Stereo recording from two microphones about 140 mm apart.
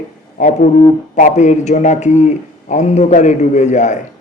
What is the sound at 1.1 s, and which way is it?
Speech, 60° left (ahead or behind).